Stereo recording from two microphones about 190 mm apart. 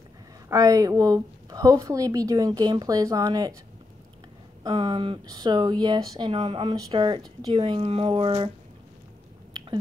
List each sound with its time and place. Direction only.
0.5 s speech: 15° right (ahead or behind)
4.6 s speech: 25° right (ahead or behind)